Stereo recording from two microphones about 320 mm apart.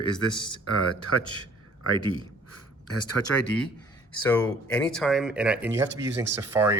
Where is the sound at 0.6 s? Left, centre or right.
Left.